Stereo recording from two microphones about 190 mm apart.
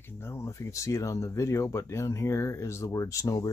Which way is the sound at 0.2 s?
15° left (ahead or behind).